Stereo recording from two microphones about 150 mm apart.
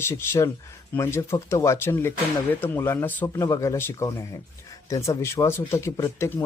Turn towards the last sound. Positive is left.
turn(degrees=20)  # may be behind; listen again after turning